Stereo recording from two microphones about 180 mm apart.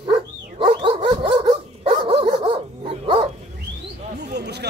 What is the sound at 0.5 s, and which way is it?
Dog, 30° right (ahead or behind).